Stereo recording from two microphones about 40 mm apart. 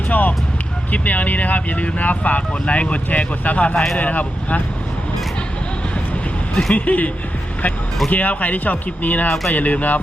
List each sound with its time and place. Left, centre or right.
0.1 s music: left
0.9 s speech: left
6.5 s speech: centre
6.7 s speech: left
8.1 s speech: left